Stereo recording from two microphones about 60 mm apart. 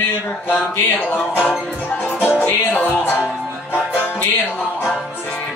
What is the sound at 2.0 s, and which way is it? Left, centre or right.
Music, left.